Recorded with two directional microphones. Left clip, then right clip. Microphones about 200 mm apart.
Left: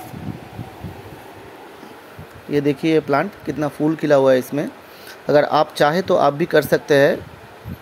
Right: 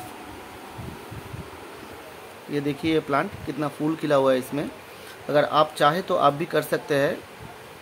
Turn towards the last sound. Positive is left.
turn(degrees=25)  # may be behind; listen again after turning